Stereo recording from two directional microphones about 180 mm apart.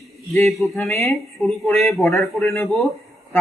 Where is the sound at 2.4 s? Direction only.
15° left (ahead or behind).